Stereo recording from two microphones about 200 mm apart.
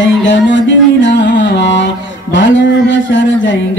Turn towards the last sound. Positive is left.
turn(degrees=65)  # may be behind; listen again after turning